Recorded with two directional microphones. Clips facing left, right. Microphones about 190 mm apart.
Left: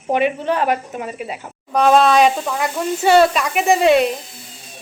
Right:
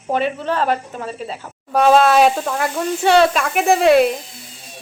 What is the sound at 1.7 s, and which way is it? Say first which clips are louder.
Speech: right 1 dB; 5° right (ahead or behind).